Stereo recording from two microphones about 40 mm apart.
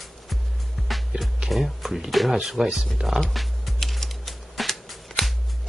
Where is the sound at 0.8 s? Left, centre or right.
Centre.